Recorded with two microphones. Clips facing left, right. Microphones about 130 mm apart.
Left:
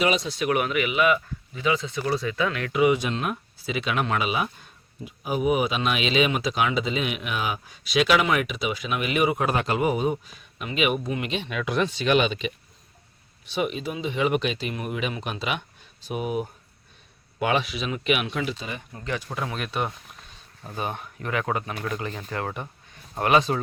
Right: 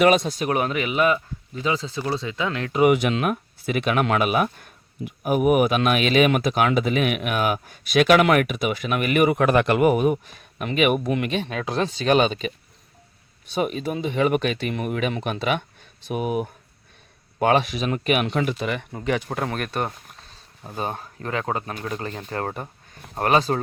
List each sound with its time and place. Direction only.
0.0 s speech: 50° right (ahead or behind); by 2.8 s 25° right (ahead or behind)
2.8 s speech: 65° right (ahead or behind)
11.4 s speech: 35° right (ahead or behind)
13.5 s speech: 45° right (ahead or behind)
20.7 s speech: 35° right (ahead or behind)